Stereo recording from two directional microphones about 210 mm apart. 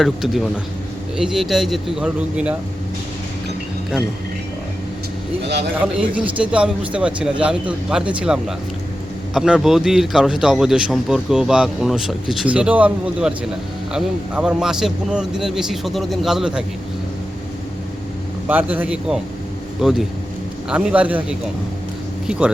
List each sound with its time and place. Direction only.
0.0 s a man's voice: centre (ahead or behind)
5.5 s speech: 55° right (ahead or behind)
5.8 s a man's voice: 5° right (ahead or behind)
18.4 s a man's voice: 10° right (ahead or behind)